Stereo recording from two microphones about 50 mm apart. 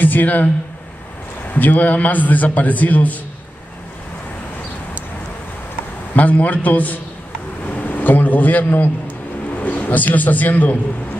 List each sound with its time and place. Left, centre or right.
0.0 s a man's voice: left
1.5 s a man's voice: left
6.1 s a man's voice: left